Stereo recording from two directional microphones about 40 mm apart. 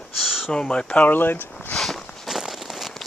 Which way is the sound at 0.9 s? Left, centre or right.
Left.